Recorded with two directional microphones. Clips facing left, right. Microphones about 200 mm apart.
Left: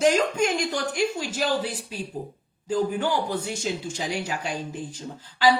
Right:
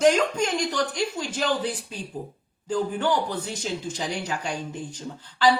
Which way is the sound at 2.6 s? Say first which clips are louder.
Even; 10° left (ahead or behind).